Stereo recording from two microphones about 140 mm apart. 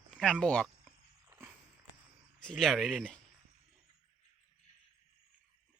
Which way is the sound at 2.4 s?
5° left (ahead or behind).